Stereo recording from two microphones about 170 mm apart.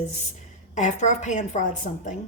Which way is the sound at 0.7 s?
45° left (ahead or behind).